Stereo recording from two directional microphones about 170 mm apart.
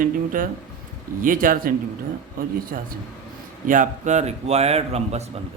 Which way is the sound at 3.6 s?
50° right (ahead or behind).